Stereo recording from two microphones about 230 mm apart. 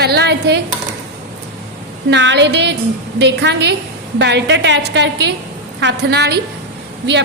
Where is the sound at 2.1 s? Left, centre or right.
Right.